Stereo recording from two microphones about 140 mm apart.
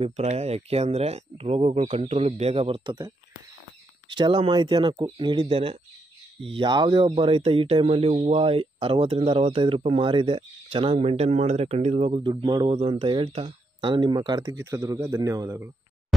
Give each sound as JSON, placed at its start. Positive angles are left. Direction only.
{"t": 0.0, "sound": "speech", "side_deg": -50}
{"t": 4.1, "sound": "speech", "side_deg": -35}